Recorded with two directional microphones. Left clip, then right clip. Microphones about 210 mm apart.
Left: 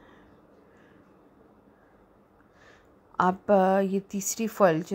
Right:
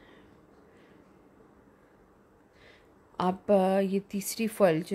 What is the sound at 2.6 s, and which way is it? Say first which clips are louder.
A woman's voice: left 1 dB; centre (ahead or behind).